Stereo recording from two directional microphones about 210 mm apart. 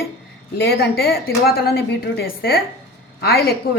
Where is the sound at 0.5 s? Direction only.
50° left (ahead or behind).